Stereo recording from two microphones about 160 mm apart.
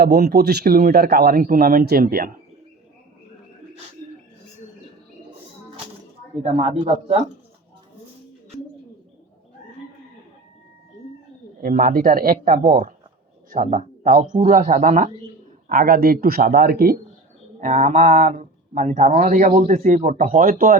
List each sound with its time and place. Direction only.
0.0 s speech: 80° right; by 2.3 s 65° right (ahead or behind)
6.4 s a man's voice: 45° right (ahead or behind)
11.6 s speech: 60° right (ahead or behind)
13.5 s a man's voice: 50° right (ahead or behind)
15.7 s speech: 65° right (ahead or behind)
17.6 s a man's voice: 50° right (ahead or behind)